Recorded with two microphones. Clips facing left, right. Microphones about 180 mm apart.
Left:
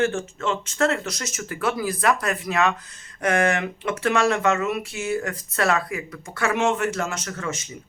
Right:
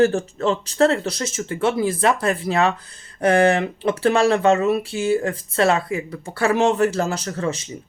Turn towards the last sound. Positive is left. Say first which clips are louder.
# right 6 dB
turn(degrees=-30)  # may be behind; listen again after turning